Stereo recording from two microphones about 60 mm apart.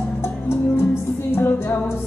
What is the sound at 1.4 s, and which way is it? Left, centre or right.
Music, left.